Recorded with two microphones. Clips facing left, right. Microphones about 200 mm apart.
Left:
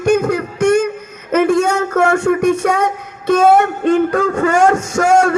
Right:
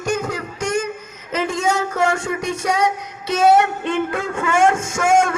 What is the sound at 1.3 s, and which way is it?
A child's voice, 60° left (ahead or behind).